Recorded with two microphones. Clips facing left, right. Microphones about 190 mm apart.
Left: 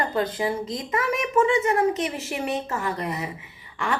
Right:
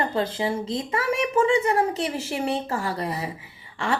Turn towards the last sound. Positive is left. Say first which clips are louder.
# right 1 dB
turn(degrees=-30)  # may be behind; listen again after turning